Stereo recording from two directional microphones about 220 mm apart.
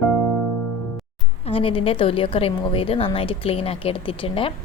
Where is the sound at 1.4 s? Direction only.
25° left (ahead or behind).